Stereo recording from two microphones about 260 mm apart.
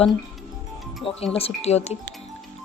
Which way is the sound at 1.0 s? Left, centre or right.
Left.